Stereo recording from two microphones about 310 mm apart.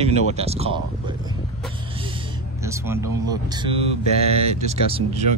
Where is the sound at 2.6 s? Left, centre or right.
Centre.